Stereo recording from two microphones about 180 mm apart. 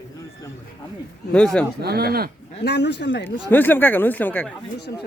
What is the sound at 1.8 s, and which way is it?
Speech, 60° right (ahead or behind).